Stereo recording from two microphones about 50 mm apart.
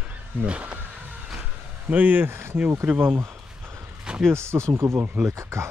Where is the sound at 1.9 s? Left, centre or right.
Right.